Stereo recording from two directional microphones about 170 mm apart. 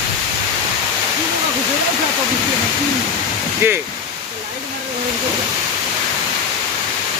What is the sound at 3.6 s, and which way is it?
Speech, 15° right (ahead or behind).